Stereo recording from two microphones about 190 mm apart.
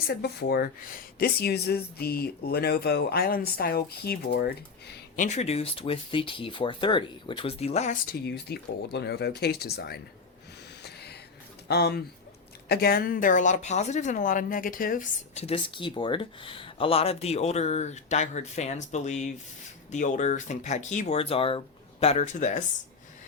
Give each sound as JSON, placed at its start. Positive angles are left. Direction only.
{"t": 0.1, "sound": "speech", "side_deg": 60}
{"t": 5.1, "sound": "speech", "side_deg": 40}
{"t": 8.1, "sound": "speech", "side_deg": 60}
{"t": 10.8, "sound": "a sound", "side_deg": 55}
{"t": 11.7, "sound": "speech", "side_deg": 55}
{"t": 15.4, "sound": "speech", "side_deg": 30}